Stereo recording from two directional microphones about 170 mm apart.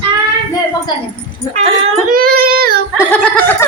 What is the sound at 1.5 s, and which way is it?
Speech, 40° right (ahead or behind).